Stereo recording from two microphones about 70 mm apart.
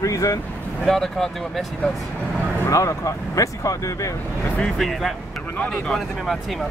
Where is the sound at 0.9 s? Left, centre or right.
Centre.